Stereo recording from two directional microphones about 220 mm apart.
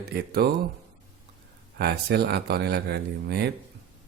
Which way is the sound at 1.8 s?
45° right (ahead or behind).